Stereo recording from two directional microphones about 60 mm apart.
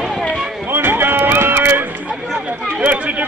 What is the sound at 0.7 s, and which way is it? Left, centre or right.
Run, right.